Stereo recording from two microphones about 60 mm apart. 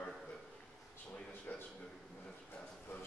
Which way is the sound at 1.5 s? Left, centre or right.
Left.